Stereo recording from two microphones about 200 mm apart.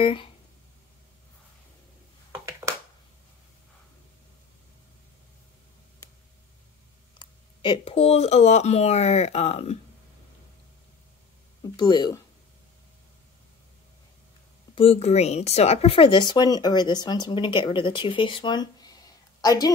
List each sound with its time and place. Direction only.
0.0 s speech: 25° left (ahead or behind)
2.3 s a sound: 15° right (ahead or behind)
7.2 s speech: 25° left (ahead or behind)
11.7 s speech: 20° left (ahead or behind)
14.8 s a woman's voice: 30° left (ahead or behind)